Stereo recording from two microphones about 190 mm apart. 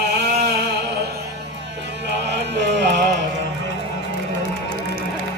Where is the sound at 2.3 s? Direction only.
65° right (ahead or behind).